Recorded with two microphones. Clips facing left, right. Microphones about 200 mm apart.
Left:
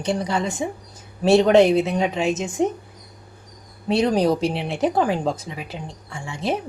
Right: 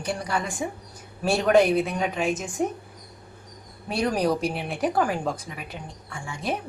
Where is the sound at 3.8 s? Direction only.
25° left (ahead or behind).